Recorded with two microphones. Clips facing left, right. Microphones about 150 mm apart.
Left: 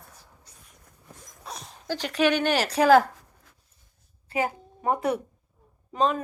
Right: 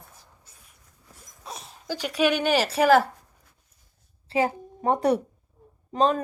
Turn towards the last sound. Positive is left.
turn(degrees=-35)  # may be behind; listen again after turning